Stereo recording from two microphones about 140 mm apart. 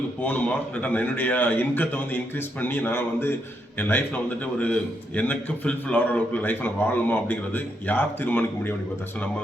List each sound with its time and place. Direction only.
0.2 s a man's voice: 10° left (ahead or behind)